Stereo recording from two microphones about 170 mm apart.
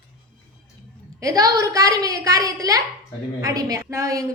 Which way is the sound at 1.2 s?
20° right (ahead or behind).